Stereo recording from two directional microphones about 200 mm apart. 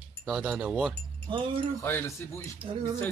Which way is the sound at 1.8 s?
10° left (ahead or behind).